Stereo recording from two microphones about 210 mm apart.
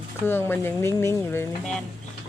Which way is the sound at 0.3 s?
10° left (ahead or behind).